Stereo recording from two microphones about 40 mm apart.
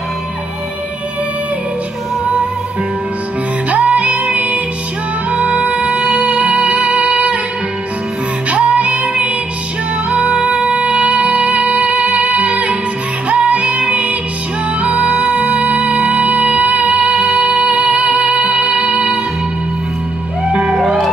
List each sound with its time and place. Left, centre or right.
3.8 s music: right
5.9 s music: right
6.8 s music: right
8.5 s music: right
12.1 s music: right
15.2 s music: centre
15.6 s music: right
16.0 s music: centre
16.3 s music: right
17.1 s music: centre
17.6 s music: right
20.5 s music: right
20.8 s music: centre